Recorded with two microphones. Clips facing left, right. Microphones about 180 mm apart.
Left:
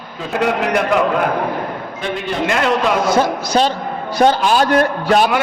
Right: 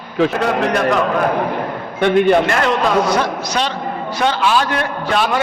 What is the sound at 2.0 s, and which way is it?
Speech, 60° right (ahead or behind).